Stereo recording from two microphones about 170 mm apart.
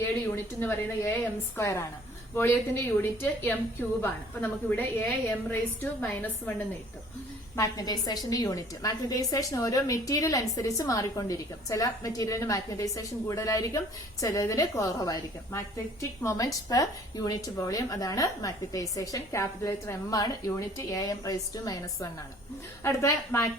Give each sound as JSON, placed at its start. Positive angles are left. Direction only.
{"t": 0.6, "sound": "a woman's voice", "side_deg": 10}
{"t": 7.5, "sound": "a woman's voice", "side_deg": 20}